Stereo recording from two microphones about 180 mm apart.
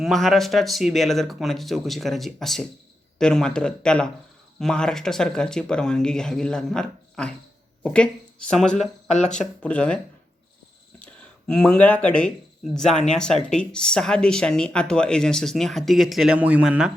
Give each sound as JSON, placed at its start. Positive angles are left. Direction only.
{"t": 0.0, "sound": "speech", "side_deg": 0}
{"t": 8.7, "sound": "speech", "side_deg": 40}
{"t": 9.4, "sound": "speech", "side_deg": 5}
{"t": 11.0, "sound": "speech", "side_deg": 5}